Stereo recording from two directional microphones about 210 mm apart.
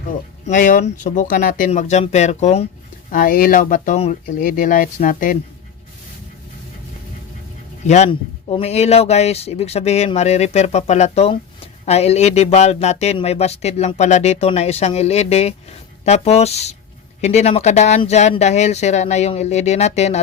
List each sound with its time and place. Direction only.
0.4 s speech: 40° left (ahead or behind)
7.9 s speech: 30° left (ahead or behind)